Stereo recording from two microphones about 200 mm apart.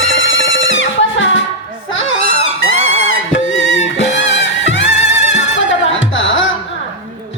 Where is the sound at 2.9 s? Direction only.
90° left; by 6.4 s 70° left (ahead or behind).